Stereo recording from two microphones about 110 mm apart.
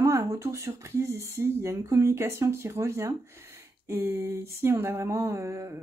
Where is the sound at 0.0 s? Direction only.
25° right (ahead or behind).